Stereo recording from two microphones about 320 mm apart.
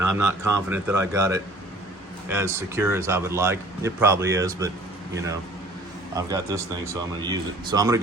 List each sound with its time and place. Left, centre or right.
0.0 s speech: right
0.7 s speech: centre
6.1 s speech: centre